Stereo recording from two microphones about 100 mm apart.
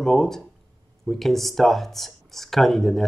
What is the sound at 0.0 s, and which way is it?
Speech, 5° left (ahead or behind).